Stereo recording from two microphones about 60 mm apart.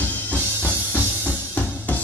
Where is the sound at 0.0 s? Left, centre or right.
Left.